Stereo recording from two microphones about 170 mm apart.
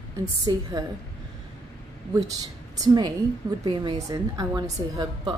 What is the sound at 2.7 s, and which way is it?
A woman's voice, 25° right (ahead or behind).